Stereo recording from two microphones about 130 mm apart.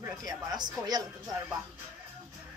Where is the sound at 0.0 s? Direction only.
30° right (ahead or behind).